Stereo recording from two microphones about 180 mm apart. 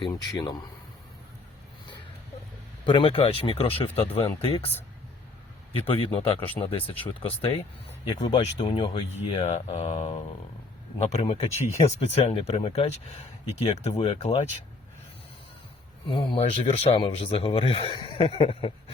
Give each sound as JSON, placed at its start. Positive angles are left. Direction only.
{"t": 0.3, "sound": "a man's voice", "side_deg": 25}
{"t": 2.8, "sound": "speech", "side_deg": 25}
{"t": 5.8, "sound": "speech", "side_deg": 30}
{"t": 16.0, "sound": "speech", "side_deg": 30}